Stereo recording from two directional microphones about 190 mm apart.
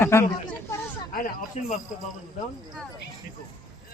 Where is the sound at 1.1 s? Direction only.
50° left (ahead or behind).